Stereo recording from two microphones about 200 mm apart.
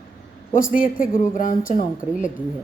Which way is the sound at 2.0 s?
5° right (ahead or behind).